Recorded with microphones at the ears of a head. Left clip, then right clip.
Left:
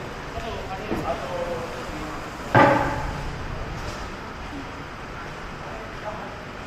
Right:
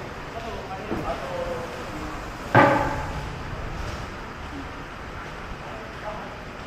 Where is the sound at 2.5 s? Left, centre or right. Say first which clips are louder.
Left 1 dB; centre.